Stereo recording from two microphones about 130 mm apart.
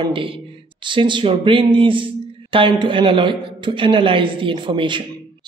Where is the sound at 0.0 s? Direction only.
40° right (ahead or behind).